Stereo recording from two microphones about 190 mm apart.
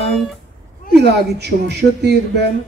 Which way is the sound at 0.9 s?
60° right (ahead or behind).